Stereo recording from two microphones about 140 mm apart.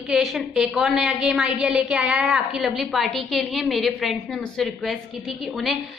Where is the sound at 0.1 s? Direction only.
Centre (ahead or behind).